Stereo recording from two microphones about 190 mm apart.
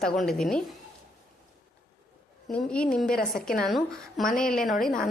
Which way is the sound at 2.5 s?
5° left (ahead or behind).